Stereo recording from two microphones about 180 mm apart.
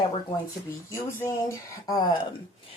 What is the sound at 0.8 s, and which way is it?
Speech, 15° left (ahead or behind).